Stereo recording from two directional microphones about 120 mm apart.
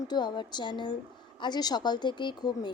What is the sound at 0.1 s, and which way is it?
A woman's voice, 40° left (ahead or behind).